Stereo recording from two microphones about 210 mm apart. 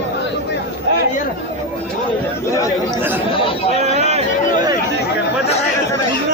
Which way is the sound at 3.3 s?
25° left (ahead or behind).